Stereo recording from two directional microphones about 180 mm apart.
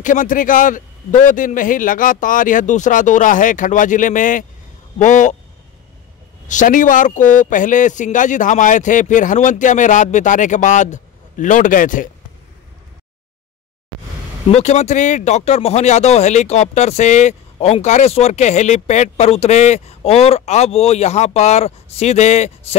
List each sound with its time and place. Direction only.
0.0 s speech: 45° left (ahead or behind)
6.4 s speech: 45° left (ahead or behind)
14.5 s speech: 40° left (ahead or behind)